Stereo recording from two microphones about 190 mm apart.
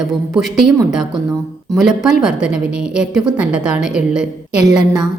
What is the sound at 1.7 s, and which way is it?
A woman's voice, centre (ahead or behind).